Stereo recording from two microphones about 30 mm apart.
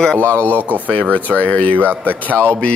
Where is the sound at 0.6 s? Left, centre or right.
Right.